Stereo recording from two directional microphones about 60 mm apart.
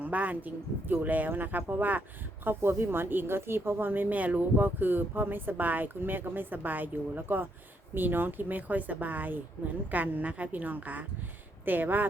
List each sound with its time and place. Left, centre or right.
0.0 s a woman's voice: right